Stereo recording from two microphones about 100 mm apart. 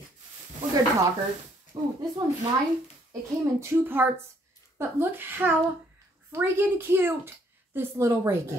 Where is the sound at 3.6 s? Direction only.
20° right (ahead or behind).